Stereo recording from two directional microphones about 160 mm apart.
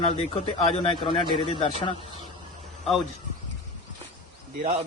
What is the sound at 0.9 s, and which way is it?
Speech, 30° left (ahead or behind).